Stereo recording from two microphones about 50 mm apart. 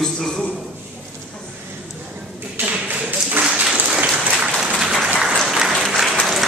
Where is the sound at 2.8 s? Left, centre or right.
Right.